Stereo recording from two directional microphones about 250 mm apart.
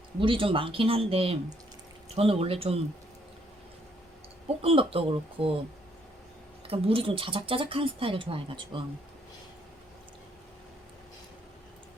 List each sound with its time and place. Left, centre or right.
0.2 s speech: right
4.4 s speech: right
6.7 s speech: right